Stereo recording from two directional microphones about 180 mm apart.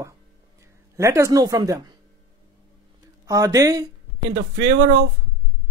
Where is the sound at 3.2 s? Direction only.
20° right (ahead or behind).